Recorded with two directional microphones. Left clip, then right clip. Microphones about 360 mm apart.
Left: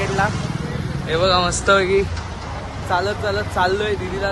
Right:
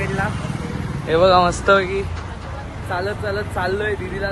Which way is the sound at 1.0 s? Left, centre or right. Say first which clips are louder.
Right 4 dB; centre.